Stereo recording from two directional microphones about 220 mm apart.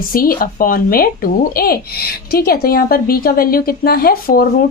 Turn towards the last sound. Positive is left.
turn(degrees=40)  # may be behind; listen again after turning